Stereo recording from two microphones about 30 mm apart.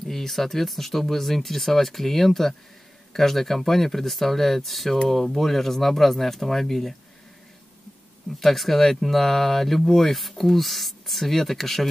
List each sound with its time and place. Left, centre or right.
0.0 s speech: centre
8.4 s speech: centre